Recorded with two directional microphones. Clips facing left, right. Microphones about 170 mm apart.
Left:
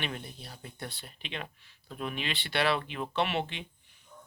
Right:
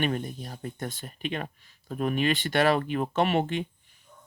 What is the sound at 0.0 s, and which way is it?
Speech, 45° right (ahead or behind).